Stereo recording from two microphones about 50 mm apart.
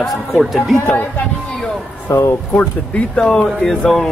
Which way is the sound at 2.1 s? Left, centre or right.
Left.